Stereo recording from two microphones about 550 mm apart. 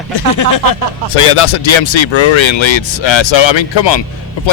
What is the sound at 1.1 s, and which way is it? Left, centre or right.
Speech, left.